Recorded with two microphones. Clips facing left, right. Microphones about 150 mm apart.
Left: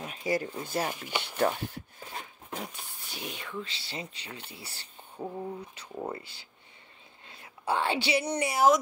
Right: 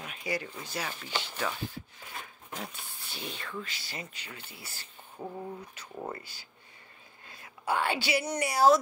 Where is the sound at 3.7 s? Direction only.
30° left (ahead or behind).